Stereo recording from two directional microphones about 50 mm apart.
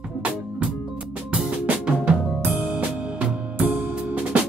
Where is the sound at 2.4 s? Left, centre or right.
Right.